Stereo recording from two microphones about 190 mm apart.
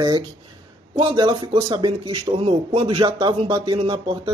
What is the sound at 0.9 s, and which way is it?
A man's voice, 25° right (ahead or behind).